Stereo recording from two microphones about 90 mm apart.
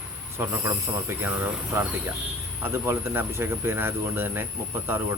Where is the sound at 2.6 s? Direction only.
25° right (ahead or behind).